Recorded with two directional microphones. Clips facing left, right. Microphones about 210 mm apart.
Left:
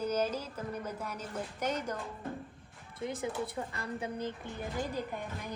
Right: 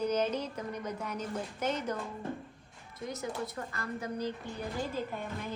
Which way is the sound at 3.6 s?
15° left (ahead or behind).